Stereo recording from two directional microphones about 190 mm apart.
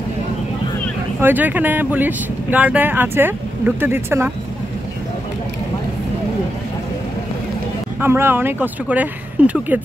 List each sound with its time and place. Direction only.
1.2 s speech: 10° right (ahead or behind)
8.0 s speech: 10° right (ahead or behind)